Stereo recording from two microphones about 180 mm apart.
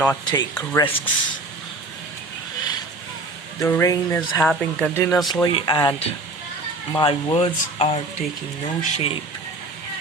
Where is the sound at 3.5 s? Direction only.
15° left (ahead or behind).